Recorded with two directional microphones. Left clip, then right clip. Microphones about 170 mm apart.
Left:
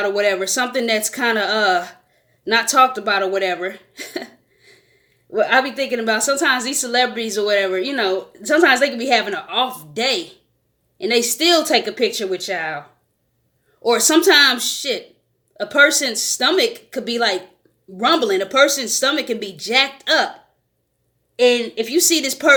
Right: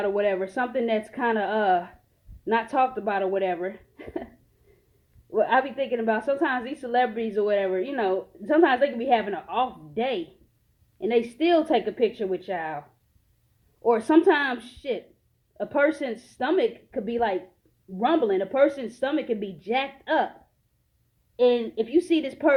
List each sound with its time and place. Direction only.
0.0 s a woman's voice: 35° left (ahead or behind)
5.5 s a woman's voice: 40° left (ahead or behind)
13.8 s a woman's voice: 35° left (ahead or behind)
21.3 s speech: 15° left (ahead or behind)
21.9 s a woman's voice: 35° left (ahead or behind)